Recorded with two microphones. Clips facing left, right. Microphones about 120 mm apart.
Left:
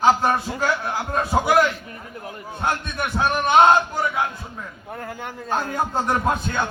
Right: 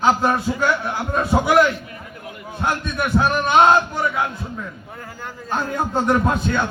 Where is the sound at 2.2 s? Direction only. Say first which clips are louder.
Even; 30° left (ahead or behind).